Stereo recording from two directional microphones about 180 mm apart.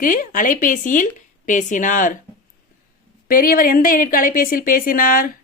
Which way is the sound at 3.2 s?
50° left (ahead or behind).